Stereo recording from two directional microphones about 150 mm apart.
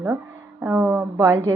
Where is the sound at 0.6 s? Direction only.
10° right (ahead or behind).